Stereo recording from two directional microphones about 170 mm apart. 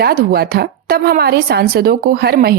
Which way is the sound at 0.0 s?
60° right (ahead or behind).